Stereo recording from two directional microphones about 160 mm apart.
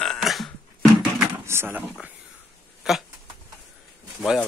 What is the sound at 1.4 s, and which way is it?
Speech, 15° right (ahead or behind).